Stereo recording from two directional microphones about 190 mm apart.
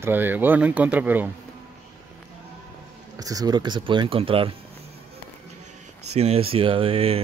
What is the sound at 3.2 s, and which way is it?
Speech, 20° right (ahead or behind).